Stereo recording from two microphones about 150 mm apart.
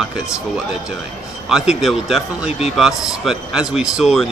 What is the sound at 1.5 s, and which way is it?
Speech, 5° right (ahead or behind).